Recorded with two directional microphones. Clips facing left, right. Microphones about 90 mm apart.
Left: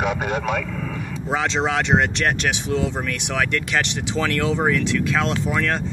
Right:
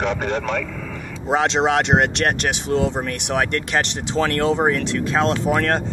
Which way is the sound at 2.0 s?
60° right (ahead or behind).